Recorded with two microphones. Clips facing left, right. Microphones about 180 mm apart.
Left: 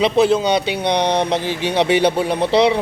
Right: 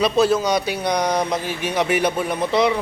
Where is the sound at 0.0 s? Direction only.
20° left (ahead or behind).